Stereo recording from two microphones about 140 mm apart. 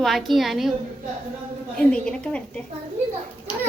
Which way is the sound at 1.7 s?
5° left (ahead or behind).